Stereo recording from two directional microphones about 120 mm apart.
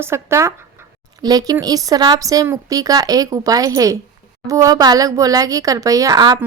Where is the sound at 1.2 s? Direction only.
35° right (ahead or behind).